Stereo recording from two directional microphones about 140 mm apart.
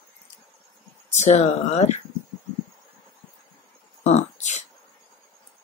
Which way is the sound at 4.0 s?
55° left (ahead or behind).